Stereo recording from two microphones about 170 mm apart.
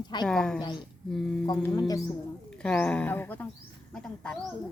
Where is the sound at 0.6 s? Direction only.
25° left (ahead or behind).